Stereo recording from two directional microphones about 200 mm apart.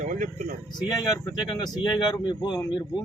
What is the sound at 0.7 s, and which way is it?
Speech, 20° left (ahead or behind).